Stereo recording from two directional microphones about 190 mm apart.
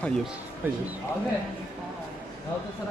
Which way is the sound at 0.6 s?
10° right (ahead or behind).